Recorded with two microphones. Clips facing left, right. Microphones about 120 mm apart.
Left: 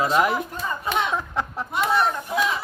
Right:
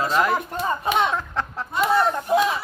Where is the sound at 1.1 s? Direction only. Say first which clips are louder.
Even; 15° left (ahead or behind).